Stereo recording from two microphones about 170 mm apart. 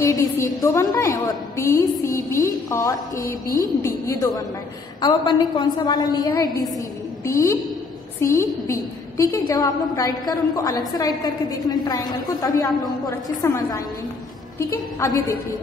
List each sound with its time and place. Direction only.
0.0 s a woman's voice: 20° left (ahead or behind)
8.2 s a woman's voice: 15° left (ahead or behind)